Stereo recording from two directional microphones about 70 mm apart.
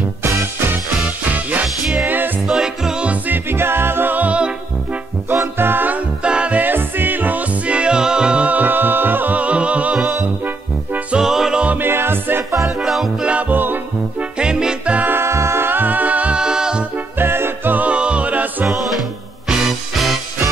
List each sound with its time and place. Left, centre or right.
0.2 s music: right
1.3 s music: right
2.4 s music: centre
3.3 s music: right
5.3 s music: right
11.1 s music: centre
11.6 s music: right
12.6 s music: centre
13.2 s music: centre
14.4 s music: centre
15.0 s music: right; by 16.8 s centre
16.9 s music: right
18.7 s music: centre